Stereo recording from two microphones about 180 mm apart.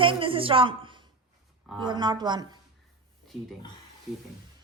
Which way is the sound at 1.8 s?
25° right (ahead or behind).